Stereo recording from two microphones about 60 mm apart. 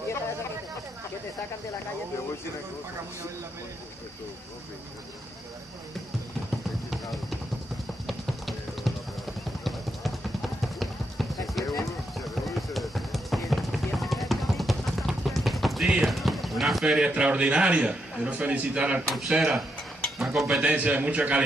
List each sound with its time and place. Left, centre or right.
6.9 s a sound: centre
8.1 s music: centre
10.6 s run: centre
12.4 s music: centre
16.1 s run: centre
16.8 s a man's voice: centre
19.0 s speech: centre
19.3 s a man's voice: centre
20.2 s a sound: centre
20.6 s a man's voice: centre